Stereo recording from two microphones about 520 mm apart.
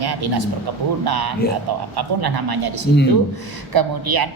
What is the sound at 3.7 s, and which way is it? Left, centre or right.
Speech, right.